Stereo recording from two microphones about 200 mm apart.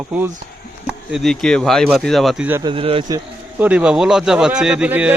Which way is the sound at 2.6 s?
25° right (ahead or behind).